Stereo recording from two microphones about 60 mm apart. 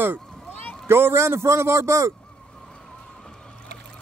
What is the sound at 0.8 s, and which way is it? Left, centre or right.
A man's voice, right.